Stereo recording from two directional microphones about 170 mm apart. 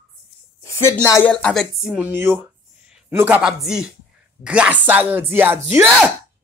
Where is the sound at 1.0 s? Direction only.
20° left (ahead or behind).